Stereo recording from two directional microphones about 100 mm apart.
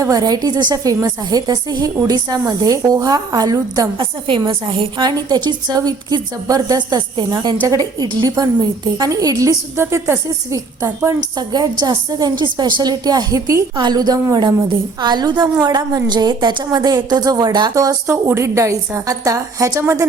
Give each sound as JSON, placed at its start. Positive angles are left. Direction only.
{"t": 0.0, "sound": "a woman's voice", "side_deg": -40}
{"t": 3.9, "sound": "a woman's voice", "side_deg": -55}
{"t": 9.7, "sound": "speech", "side_deg": -25}
{"t": 11.3, "sound": "a woman's voice", "side_deg": -40}
{"t": 17.7, "sound": "a woman's voice", "side_deg": -30}